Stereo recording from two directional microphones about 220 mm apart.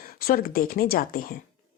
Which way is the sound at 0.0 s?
40° left (ahead or behind).